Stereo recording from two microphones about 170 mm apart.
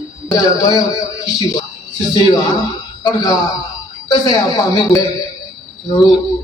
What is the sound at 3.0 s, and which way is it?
A man's voice, 20° left (ahead or behind).